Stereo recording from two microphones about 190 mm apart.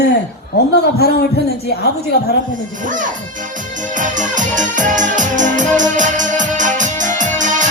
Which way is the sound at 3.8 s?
40° right (ahead or behind).